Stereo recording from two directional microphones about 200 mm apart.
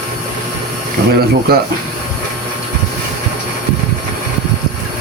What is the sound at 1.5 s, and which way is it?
Speech, 50° right (ahead or behind).